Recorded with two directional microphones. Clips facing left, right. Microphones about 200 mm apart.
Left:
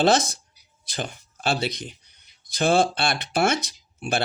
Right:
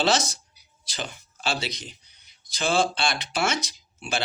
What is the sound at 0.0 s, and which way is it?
Speech, 55° left (ahead or behind).